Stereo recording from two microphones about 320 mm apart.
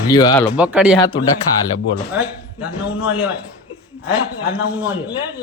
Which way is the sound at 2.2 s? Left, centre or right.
Centre.